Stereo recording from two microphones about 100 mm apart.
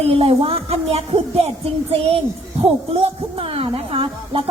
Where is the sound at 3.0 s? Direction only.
70° right (ahead or behind).